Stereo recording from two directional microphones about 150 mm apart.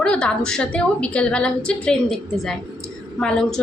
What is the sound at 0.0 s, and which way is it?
A woman's voice, 5° left (ahead or behind).